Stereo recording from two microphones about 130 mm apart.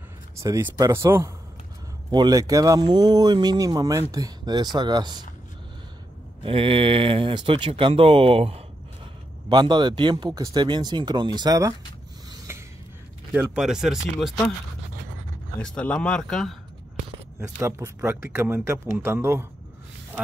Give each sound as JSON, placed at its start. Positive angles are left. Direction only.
{"t": 0.4, "sound": "speech", "side_deg": -25}
{"t": 2.0, "sound": "speech", "side_deg": -35}
{"t": 6.4, "sound": "speech", "side_deg": -45}
{"t": 9.5, "sound": "speech", "side_deg": -35}
{"t": 12.3, "sound": "a sound", "side_deg": -20}
{"t": 13.6, "sound": "speech", "side_deg": -5}
{"t": 15.6, "sound": "speech", "side_deg": 10}
{"t": 17.4, "sound": "speech", "side_deg": -20}